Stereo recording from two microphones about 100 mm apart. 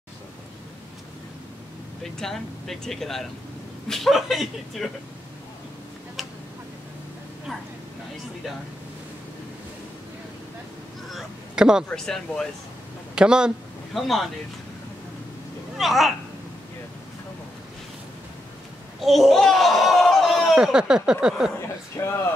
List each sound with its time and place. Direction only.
2.1 s speech: 5° left (ahead or behind)
11.1 s a sound: 5° right (ahead or behind)
11.9 s speech: 5° left (ahead or behind)
13.1 s speech: 10° right (ahead or behind)
15.8 s speech: centre (ahead or behind)
18.9 s speech: centre (ahead or behind)
21.5 s a sound: 25° left (ahead or behind)